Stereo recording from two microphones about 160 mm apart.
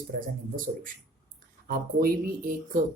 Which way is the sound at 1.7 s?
65° right (ahead or behind).